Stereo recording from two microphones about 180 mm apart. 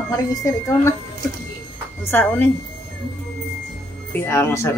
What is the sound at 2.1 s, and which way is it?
Speech, 10° left (ahead or behind).